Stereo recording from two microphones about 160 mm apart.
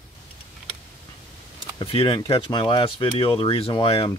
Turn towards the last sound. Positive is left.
turn(degrees=30)  # may be behind; listen again after turning